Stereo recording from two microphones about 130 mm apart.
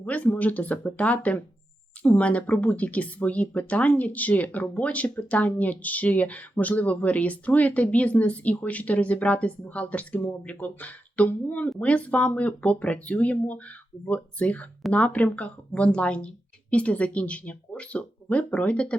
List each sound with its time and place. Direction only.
0.0 s speech: 10° left (ahead or behind)